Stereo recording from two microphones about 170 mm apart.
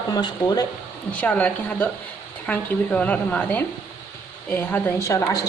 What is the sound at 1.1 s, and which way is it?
A woman's voice, 10° left (ahead or behind).